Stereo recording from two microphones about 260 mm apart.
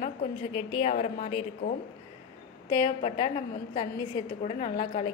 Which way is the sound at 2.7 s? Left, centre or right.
Centre.